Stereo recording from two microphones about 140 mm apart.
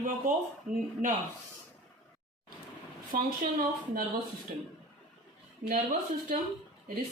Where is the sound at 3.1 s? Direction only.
90° right.